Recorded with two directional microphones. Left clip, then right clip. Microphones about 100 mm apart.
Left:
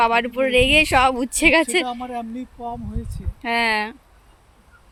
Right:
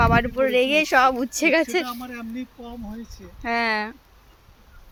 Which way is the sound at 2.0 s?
50° left (ahead or behind).